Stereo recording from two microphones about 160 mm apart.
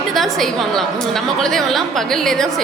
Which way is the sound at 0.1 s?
Centre (ahead or behind).